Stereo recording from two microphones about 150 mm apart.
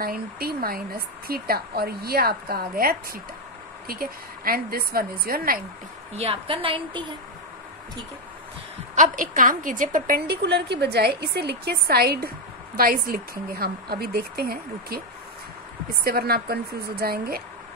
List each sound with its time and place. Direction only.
0.0 s a woman's voice: 85° right
6.1 s a woman's voice: 40° right (ahead or behind)
8.9 s a woman's voice: 60° right (ahead or behind); by 12.3 s 90° right
12.7 s a woman's voice: 75° right (ahead or behind)
16.0 s a woman's voice: 90° right